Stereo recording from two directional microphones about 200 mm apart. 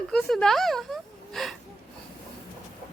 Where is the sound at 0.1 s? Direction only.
Centre (ahead or behind).